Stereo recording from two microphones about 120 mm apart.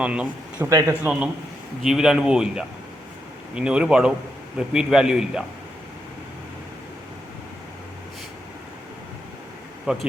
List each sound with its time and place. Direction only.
0.0 s speech: 10° right (ahead or behind)
0.7 s speech: 30° right (ahead or behind)
1.8 s a man's voice: 5° right (ahead or behind)
9.8 s speech: 5° right (ahead or behind)